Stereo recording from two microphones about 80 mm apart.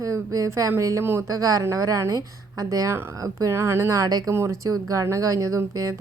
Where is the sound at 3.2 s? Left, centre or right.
Right.